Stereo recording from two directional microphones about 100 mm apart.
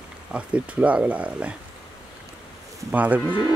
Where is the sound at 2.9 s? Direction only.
15° right (ahead or behind).